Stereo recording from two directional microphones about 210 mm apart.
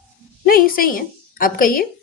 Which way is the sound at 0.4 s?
45° left (ahead or behind).